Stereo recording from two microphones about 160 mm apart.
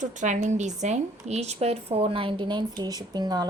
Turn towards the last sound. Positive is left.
turn(degrees=-25)  # may be behind; listen again after turning